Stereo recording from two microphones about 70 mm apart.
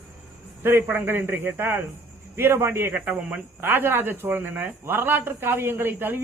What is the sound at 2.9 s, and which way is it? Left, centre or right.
Speech, centre.